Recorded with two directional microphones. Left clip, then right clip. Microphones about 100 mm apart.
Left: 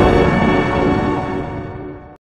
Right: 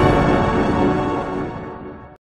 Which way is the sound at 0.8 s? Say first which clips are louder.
Left 2 dB; 15° right (ahead or behind).